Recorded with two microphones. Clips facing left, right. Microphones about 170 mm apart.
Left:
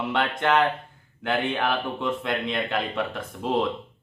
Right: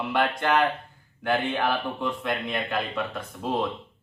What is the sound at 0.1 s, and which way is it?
Speech, 25° left (ahead or behind).